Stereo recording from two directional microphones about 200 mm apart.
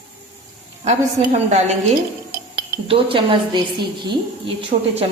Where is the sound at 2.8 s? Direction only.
25° right (ahead or behind).